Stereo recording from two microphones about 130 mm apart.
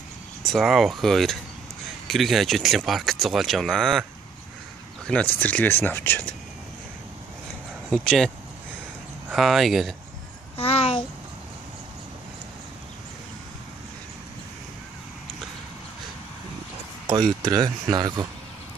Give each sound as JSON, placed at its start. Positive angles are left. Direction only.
{"t": 0.5, "sound": "speech", "side_deg": 0}
{"t": 5.0, "sound": "speech", "side_deg": 10}
{"t": 7.9, "sound": "speech", "side_deg": 5}
{"t": 9.3, "sound": "speech", "side_deg": 0}
{"t": 10.6, "sound": "a child's voice", "side_deg": 50}
{"t": 17.4, "sound": "speech", "side_deg": -30}